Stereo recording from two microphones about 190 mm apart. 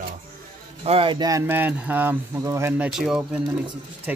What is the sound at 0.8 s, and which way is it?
Speech, 30° right (ahead or behind).